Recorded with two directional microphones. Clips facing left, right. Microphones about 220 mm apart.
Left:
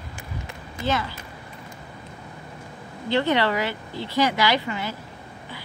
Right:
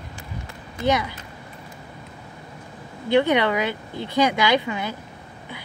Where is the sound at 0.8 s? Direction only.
20° right (ahead or behind).